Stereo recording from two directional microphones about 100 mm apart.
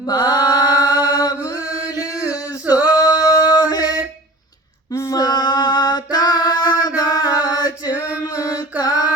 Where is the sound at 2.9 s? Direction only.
35° left (ahead or behind).